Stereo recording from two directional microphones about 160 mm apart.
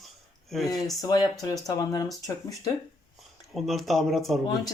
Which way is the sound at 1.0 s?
25° left (ahead or behind).